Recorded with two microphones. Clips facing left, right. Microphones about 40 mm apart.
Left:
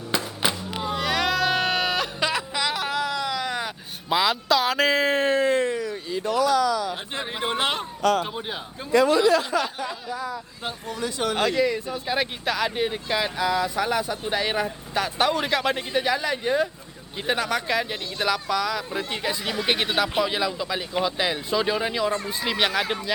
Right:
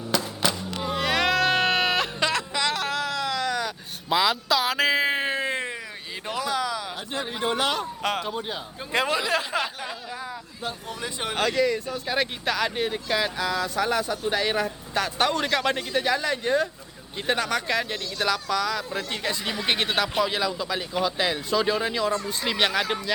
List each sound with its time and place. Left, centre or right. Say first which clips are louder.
0.1 s music: even; left
0.8 s music: right 1 dB; centre
2.3 s a sound: even; centre
3.4 s vehicle: right 1 dB; centre
4.1 s speech: left 1 dB; centre
5.3 s a sound: left 6 dB; right
6.2 s speech: left 6 dB; right
7.4 s speech: even; left
8.3 s speech: right 1 dB; centre
8.9 s speech: left 6 dB; right
11.0 s speech: left 5 dB; right
11.3 s speech: right 1 dB; centre